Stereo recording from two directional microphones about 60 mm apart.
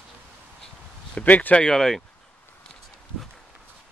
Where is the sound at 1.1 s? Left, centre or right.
Left.